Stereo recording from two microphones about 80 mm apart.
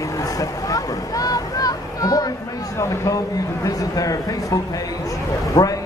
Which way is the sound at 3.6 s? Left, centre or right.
Left.